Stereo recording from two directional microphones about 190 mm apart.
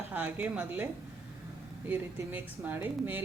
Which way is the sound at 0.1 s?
10° right (ahead or behind).